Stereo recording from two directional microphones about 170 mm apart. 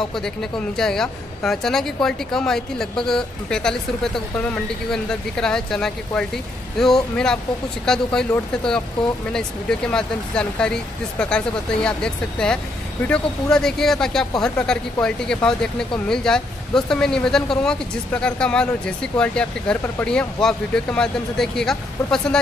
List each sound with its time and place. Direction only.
0.1 s speech: 5° left (ahead or behind)
9.3 s speech: 5° left (ahead or behind)